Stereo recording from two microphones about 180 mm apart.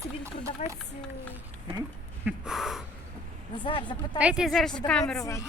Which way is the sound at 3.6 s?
30° left (ahead or behind).